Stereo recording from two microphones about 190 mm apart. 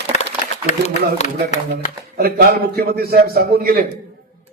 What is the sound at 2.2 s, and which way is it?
A man's voice, 55° right (ahead or behind).